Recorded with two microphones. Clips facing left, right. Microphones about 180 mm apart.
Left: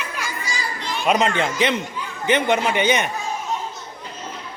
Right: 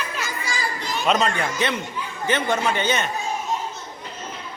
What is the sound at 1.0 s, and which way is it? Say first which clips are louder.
A woman's voice: left 2 dB; 10° left (ahead or behind).